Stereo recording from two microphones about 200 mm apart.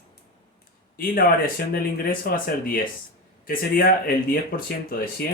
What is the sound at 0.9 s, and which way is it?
Speech, 45° left (ahead or behind).